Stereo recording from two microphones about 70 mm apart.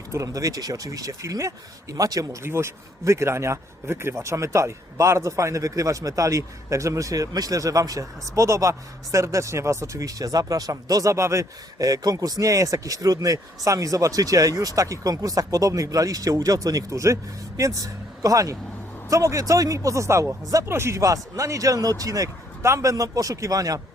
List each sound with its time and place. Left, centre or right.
0.1 s speech: right
2.4 s a man's voice: right
20.7 s speech: right
21.0 s speech: right